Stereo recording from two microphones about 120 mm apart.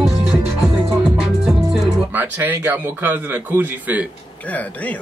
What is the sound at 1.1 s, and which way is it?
Music, 5° right (ahead or behind).